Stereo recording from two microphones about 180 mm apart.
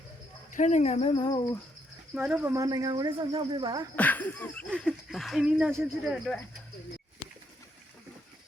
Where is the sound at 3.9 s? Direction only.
10° left (ahead or behind).